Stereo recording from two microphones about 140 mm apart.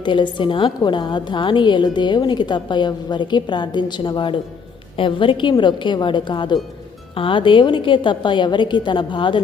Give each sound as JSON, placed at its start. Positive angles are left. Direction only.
{"t": 0.0, "sound": "a woman's voice", "side_deg": 35}